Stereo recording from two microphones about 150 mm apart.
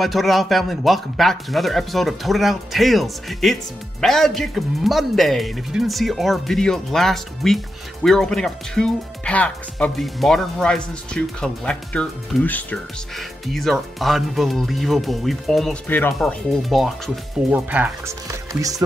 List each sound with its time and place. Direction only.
0.0 s a man's voice: centre (ahead or behind)
17.5 s speech: 10° right (ahead or behind)
18.5 s speech: 25° right (ahead or behind)